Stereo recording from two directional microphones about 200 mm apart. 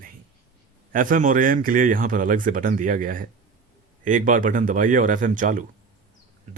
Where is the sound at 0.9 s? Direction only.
45° right (ahead or behind).